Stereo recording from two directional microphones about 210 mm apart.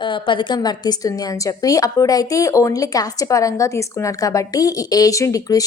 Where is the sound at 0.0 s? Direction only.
25° left (ahead or behind).